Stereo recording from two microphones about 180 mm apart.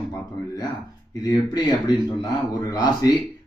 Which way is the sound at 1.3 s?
25° left (ahead or behind).